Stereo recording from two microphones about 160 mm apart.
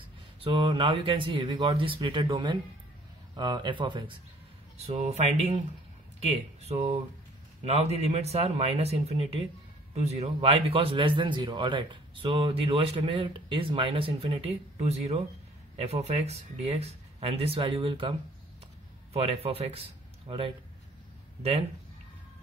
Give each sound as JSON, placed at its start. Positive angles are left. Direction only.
{"t": 0.4, "sound": "speech", "side_deg": -35}
{"t": 4.7, "sound": "speech", "side_deg": -40}
{"t": 19.1, "sound": "speech", "side_deg": -40}